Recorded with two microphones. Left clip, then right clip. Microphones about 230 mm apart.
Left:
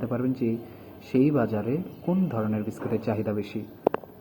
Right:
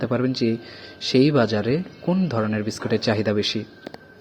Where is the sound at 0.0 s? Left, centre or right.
Right.